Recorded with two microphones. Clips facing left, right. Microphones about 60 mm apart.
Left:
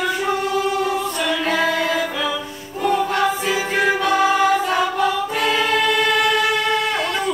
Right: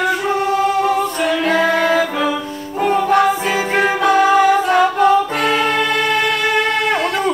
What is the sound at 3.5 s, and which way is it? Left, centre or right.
Music, right.